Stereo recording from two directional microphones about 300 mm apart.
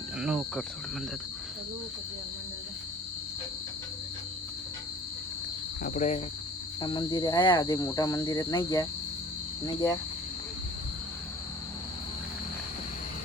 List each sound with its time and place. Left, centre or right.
0.2 s speech: centre
5.8 s cricket: left